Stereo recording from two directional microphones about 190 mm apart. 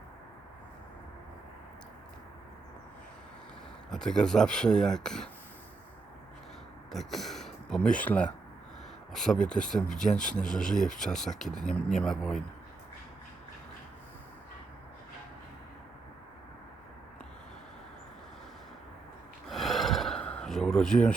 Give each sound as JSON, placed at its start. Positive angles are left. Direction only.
{"t": 3.9, "sound": "speech", "side_deg": 5}
{"t": 6.9, "sound": "speech", "side_deg": 0}
{"t": 19.5, "sound": "gasp", "side_deg": 0}